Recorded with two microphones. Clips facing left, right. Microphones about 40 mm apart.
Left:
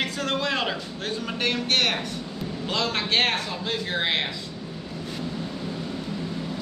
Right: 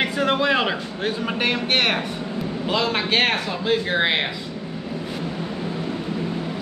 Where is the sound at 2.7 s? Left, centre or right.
Centre.